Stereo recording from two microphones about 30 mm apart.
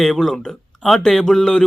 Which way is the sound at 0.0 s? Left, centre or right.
Centre.